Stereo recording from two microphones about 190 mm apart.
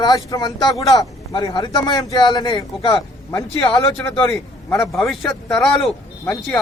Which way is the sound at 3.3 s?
5° left (ahead or behind).